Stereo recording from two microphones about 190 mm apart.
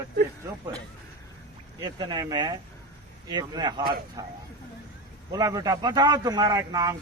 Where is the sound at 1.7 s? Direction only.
20° right (ahead or behind).